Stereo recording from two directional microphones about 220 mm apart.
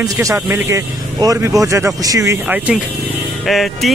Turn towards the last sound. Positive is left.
turn(degrees=0)  # may be behind; listen again after turning